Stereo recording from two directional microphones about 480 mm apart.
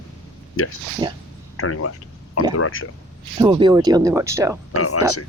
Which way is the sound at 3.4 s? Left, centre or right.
Centre.